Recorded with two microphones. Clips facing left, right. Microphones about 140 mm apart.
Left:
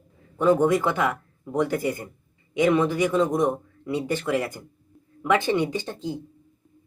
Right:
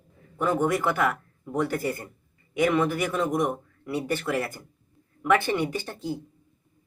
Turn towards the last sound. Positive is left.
turn(degrees=20)  # may be behind; listen again after turning